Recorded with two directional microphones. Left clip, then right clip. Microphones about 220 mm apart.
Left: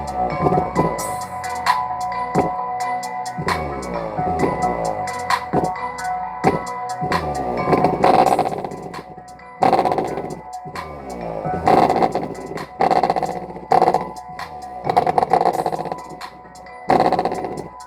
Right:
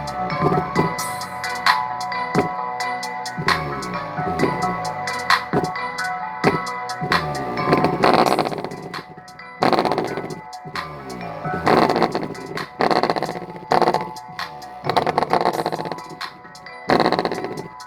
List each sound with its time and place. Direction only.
0.0 s music: 25° right (ahead or behind)
11.6 s vehicle: 25° right (ahead or behind)
14.8 s a sound: 25° right (ahead or behind)
16.8 s music: 25° right (ahead or behind)